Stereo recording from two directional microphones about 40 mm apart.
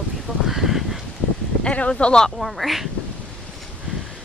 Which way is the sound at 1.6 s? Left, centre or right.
Left.